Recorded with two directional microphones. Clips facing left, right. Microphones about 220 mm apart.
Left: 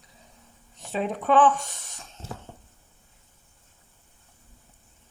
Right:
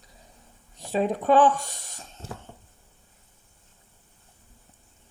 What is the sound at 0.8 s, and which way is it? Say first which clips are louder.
Speech: right 4 dB; 35° right (ahead or behind).